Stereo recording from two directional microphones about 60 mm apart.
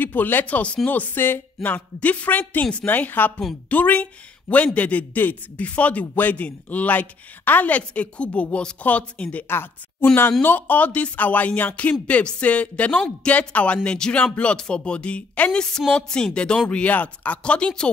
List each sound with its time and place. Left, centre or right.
0.0 s speech: left
2.0 s a man's voice: left
9.5 s a man's voice: left; by 17.8 s centre